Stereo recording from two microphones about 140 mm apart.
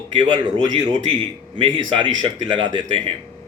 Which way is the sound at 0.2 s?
30° right (ahead or behind).